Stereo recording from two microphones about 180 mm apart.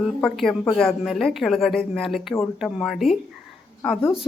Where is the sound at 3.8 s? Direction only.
10° left (ahead or behind).